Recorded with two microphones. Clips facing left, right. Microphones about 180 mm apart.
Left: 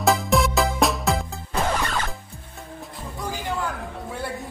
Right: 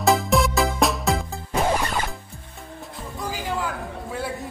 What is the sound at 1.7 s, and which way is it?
Music, 20° right (ahead or behind).